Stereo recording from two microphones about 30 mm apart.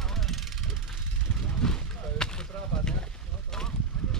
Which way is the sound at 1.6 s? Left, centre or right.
Left.